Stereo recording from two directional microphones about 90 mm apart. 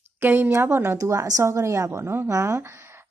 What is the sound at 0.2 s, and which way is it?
A woman's voice, 25° right (ahead or behind).